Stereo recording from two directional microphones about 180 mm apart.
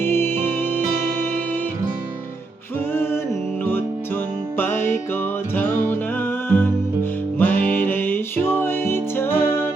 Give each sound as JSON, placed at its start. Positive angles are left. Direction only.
{"t": 0.0, "sound": "music", "side_deg": 15}
{"t": 2.9, "sound": "music", "side_deg": 15}